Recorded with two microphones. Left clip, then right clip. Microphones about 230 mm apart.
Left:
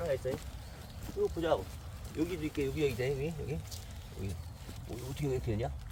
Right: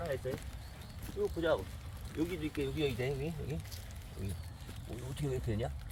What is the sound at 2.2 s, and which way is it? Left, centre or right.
Speech, left.